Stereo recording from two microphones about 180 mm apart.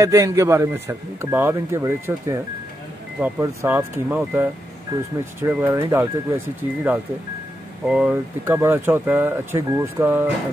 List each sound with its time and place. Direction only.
0.0 s speech: 15° right (ahead or behind)